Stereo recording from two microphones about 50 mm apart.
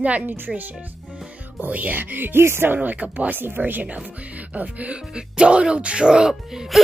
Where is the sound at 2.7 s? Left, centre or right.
Right.